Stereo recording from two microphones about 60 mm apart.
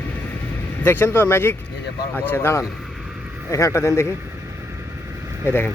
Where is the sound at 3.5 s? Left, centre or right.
Left.